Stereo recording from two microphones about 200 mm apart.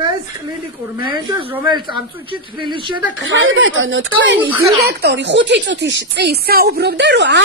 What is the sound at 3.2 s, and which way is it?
Speech, 75° right (ahead or behind).